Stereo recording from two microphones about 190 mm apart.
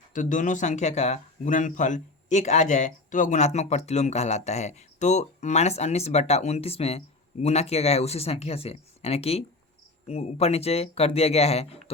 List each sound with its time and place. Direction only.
0.1 s speech: 40° left (ahead or behind)